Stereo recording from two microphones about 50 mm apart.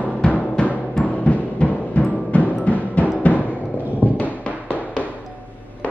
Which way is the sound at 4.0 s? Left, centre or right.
Left.